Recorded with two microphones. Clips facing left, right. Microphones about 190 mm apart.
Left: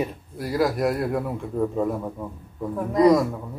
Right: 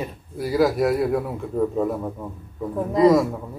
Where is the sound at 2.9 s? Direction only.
5° right (ahead or behind).